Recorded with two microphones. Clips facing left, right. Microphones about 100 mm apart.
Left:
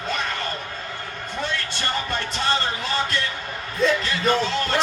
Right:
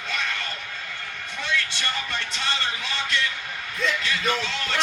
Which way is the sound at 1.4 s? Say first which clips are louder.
Even; 45° left (ahead or behind).